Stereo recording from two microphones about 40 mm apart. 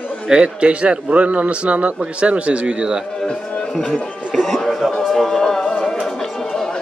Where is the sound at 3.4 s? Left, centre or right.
Left.